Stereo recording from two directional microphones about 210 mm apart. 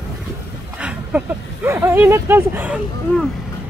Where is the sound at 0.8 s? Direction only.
5° right (ahead or behind).